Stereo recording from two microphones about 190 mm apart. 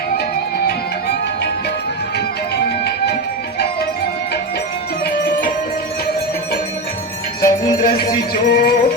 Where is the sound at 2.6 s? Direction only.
60° left (ahead or behind).